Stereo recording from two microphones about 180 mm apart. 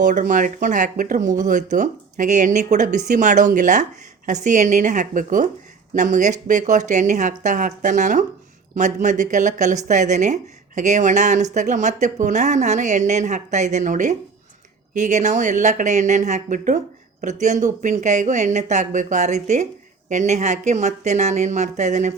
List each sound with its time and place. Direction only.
0.0 s speech: 45° right (ahead or behind)